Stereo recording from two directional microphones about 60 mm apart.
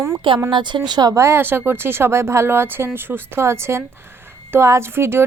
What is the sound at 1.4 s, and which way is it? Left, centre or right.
A woman's voice, right.